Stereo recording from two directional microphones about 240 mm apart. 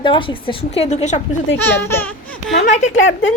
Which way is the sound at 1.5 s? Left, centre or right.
Centre.